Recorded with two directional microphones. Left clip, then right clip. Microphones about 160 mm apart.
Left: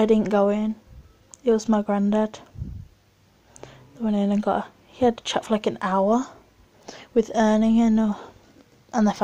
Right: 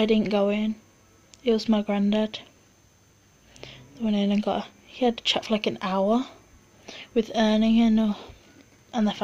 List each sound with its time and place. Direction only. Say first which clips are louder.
0.3 s speech: left 3 dB; 10° left (ahead or behind)
3.5 s speech: left 1 dB; 10° left (ahead or behind)
8.9 s speech: left 4 dB; 25° left (ahead or behind)